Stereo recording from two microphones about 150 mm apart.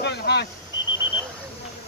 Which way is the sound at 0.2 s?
90° left.